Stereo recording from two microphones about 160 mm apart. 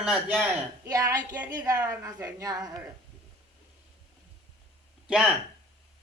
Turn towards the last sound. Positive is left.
turn(degrees=-5)  # may be behind; listen again after turning